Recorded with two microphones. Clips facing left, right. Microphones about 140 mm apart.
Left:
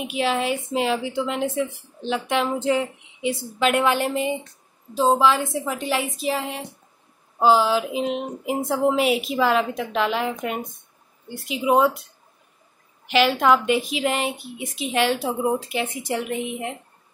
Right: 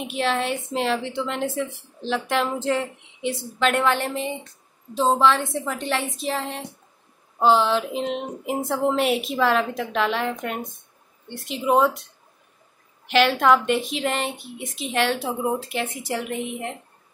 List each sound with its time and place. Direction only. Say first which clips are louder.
0.0 s a woman's voice: left 1 dB; 5° left (ahead or behind)
13.0 s a woman's voice: even; centre (ahead or behind)